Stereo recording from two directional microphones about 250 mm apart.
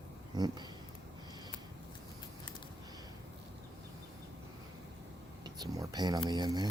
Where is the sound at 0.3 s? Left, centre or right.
Centre.